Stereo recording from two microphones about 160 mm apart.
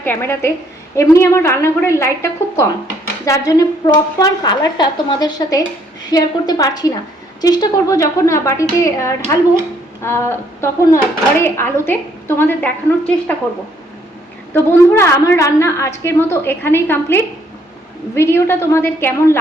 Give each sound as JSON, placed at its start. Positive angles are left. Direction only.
{"t": 0.0, "sound": "a woman's voice", "side_deg": 15}
{"t": 14.5, "sound": "speech", "side_deg": 15}